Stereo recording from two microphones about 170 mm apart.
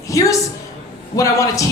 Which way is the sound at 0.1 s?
20° left (ahead or behind).